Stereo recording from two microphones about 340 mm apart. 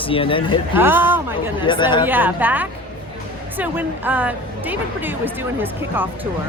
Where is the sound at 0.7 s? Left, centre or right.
Centre.